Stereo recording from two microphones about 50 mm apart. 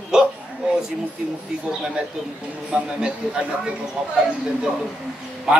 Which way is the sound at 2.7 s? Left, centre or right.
Centre.